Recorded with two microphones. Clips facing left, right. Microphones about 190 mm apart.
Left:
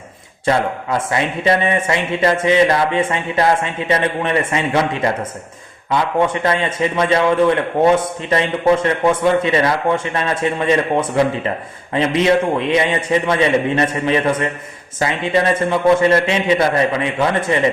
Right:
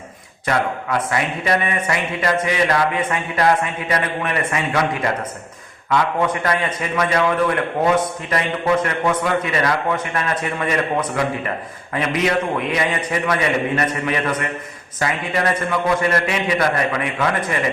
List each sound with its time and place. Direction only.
0.4 s a man's voice: 25° left (ahead or behind)
5.9 s a man's voice: 25° left (ahead or behind)